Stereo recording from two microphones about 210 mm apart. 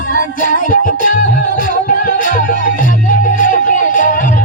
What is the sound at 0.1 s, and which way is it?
Music, 40° left (ahead or behind).